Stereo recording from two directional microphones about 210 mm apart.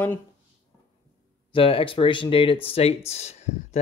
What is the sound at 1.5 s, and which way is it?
Speech, 25° left (ahead or behind).